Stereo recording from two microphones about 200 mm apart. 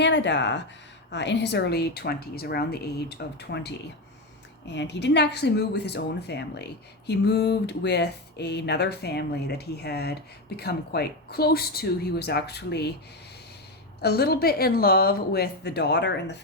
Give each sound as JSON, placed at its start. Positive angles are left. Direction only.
{"t": 0.0, "sound": "a woman's voice", "side_deg": 60}
{"t": 14.0, "sound": "a woman's voice", "side_deg": 55}